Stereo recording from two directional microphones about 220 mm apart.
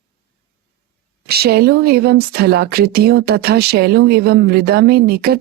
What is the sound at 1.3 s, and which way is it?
Speech, 45° right (ahead or behind).